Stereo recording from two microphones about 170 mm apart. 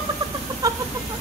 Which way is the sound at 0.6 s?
20° right (ahead or behind).